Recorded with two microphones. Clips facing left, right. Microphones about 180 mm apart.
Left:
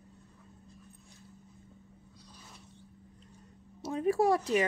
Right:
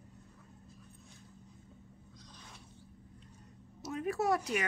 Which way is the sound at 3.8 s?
30° left (ahead or behind).